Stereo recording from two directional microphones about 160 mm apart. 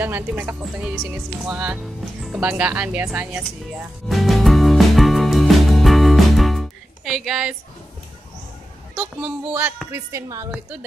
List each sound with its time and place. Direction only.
0.0 s speech: 10° right (ahead or behind)
2.2 s music: 5° right (ahead or behind)
9.5 s speech: 10° right (ahead or behind)